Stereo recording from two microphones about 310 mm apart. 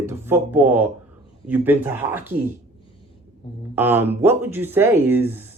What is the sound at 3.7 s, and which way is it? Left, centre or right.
Speech, centre.